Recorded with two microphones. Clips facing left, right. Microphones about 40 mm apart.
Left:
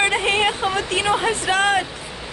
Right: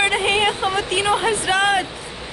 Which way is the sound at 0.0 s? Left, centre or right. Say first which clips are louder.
Right 1 dB; centre.